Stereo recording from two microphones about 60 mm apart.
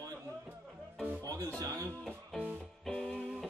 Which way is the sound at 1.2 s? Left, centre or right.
Right.